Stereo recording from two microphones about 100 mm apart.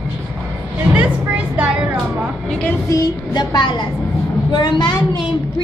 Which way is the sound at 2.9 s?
40° left (ahead or behind).